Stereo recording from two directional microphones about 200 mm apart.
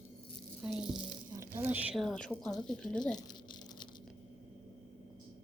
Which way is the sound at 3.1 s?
20° left (ahead or behind).